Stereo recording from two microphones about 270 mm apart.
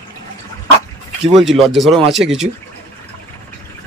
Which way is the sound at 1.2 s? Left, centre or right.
Centre.